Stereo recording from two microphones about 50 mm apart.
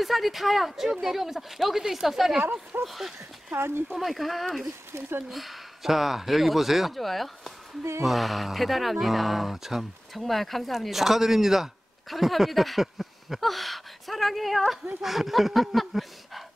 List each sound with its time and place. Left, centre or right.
0.0 s speech: centre
3.5 s speech: right
3.9 s speech: centre